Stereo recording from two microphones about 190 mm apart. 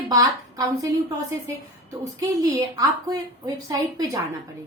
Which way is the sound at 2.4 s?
20° right (ahead or behind).